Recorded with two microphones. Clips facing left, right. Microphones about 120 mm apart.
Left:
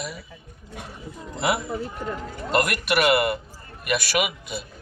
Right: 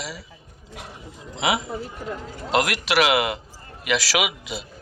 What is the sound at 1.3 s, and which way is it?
A man's voice, 90° right.